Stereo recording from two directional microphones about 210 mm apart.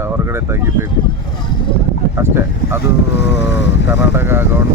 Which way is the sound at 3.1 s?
55° left (ahead or behind).